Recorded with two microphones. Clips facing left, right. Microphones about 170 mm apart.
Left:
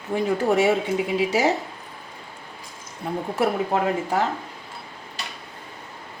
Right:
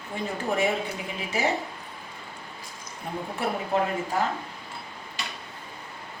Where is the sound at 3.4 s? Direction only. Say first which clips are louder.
Left 4 dB; 80° left.